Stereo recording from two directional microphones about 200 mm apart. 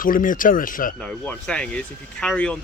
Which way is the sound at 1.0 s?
5° left (ahead or behind).